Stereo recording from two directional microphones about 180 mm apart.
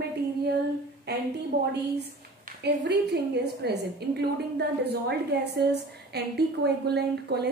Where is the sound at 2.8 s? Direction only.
70° right (ahead or behind).